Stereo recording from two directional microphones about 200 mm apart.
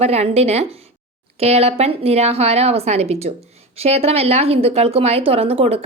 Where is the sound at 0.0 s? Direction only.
30° right (ahead or behind).